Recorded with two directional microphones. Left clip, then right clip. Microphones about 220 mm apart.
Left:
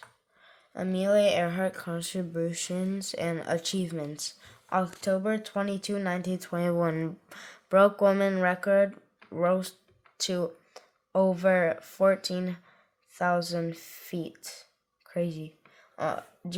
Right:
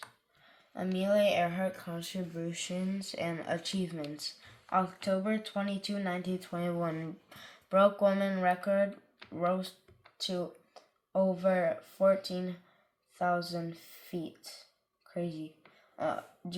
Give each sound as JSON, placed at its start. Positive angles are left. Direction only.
{"t": 0.7, "sound": "speech", "side_deg": 55}